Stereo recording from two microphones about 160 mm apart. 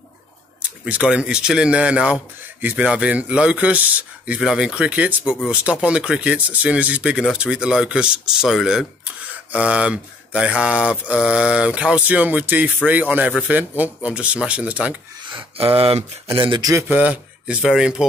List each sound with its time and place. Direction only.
0.6 s speech: 5° right (ahead or behind)
15.3 s speech: 35° right (ahead or behind)
16.4 s speech: 25° right (ahead or behind)
16.8 s speech: 10° right (ahead or behind)